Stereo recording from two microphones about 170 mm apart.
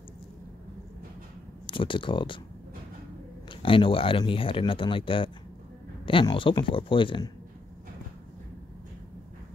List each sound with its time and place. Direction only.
1.7 s speech: 30° left (ahead or behind)
3.6 s speech: 30° left (ahead or behind)